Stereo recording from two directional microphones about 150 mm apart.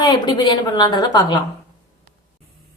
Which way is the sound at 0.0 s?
30° left (ahead or behind).